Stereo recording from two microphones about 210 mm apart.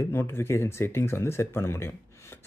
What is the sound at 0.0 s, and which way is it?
Speech, 10° left (ahead or behind).